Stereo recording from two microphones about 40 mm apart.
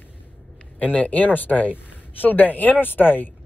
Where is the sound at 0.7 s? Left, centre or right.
Left.